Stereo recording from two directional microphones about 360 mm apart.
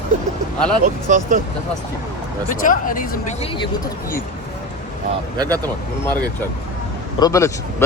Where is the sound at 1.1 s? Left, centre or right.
Right.